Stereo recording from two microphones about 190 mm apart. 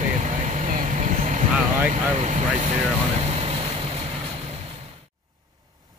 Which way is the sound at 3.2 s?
35° right (ahead or behind).